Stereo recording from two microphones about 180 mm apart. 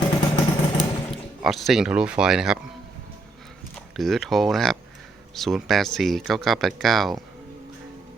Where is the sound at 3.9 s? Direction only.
Centre (ahead or behind).